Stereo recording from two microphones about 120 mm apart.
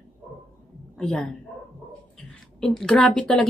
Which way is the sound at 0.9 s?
5° left (ahead or behind).